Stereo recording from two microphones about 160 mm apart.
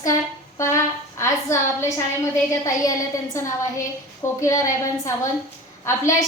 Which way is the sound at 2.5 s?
20° left (ahead or behind).